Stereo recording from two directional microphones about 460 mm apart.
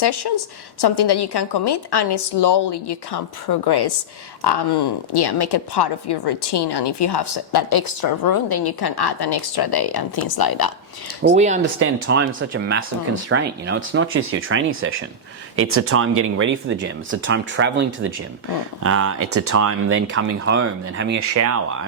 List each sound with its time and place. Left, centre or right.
0.0 s a woman's voice: left
11.2 s speech: centre
11.8 s speech: right
21.3 s speech: right